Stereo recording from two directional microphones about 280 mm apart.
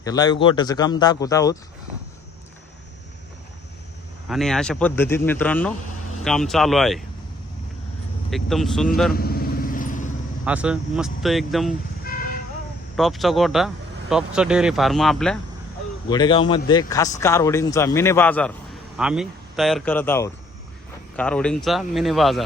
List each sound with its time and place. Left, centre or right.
0.0 s speech: centre
4.3 s speech: centre
8.3 s speech: centre
9.1 s vehicle: left
10.4 s speech: centre
13.0 s speech: centre
16.0 s speech: centre